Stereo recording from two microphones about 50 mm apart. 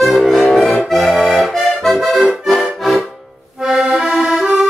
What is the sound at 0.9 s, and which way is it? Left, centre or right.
Accordion, centre.